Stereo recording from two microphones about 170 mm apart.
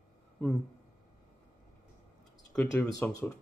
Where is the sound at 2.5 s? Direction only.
5° left (ahead or behind).